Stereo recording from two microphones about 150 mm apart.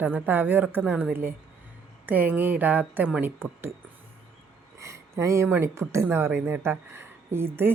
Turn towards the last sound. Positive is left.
turn(degrees=-15)  # may be behind; listen again after turning